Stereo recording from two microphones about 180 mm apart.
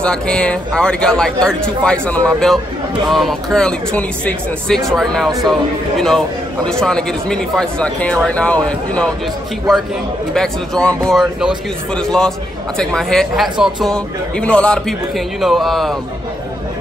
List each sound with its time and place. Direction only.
0.0 s speech: 5° left (ahead or behind)
10.3 s speech: 5° left (ahead or behind)
12.7 s speech: 5° left (ahead or behind)